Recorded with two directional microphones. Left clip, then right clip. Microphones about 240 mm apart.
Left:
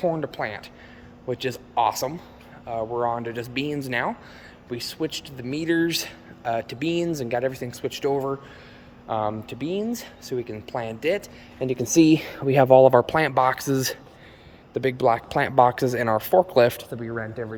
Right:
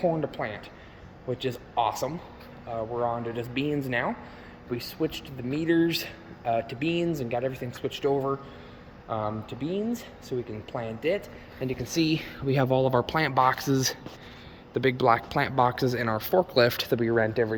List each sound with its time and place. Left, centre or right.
0.0 s speech: centre
11.8 s speech: left
12.5 s speech: centre
17.0 s speech: right